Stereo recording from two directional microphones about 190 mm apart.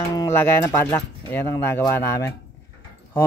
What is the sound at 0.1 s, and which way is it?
Speech, 15° left (ahead or behind).